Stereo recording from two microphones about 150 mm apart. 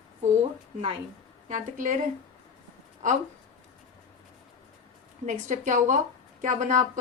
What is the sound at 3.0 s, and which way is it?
Speech, 55° right (ahead or behind).